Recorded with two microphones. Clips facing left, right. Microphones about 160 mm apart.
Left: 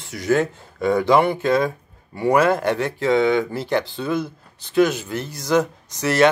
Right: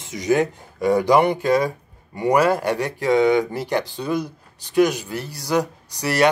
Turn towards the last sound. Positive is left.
turn(degrees=-10)  # may be behind; listen again after turning